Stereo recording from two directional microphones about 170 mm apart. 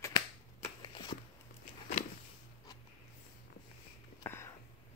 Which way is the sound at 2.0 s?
45° left (ahead or behind).